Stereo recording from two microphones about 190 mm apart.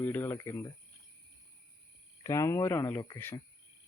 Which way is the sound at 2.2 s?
15° left (ahead or behind).